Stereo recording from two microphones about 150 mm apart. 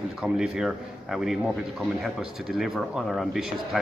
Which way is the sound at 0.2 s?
5° right (ahead or behind).